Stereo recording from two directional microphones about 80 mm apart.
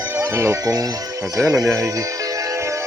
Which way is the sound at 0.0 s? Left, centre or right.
Right.